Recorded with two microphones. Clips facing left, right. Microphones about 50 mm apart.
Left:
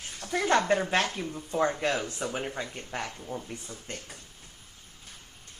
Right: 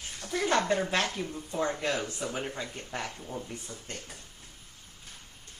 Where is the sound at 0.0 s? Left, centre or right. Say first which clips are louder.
Left 2 dB; left.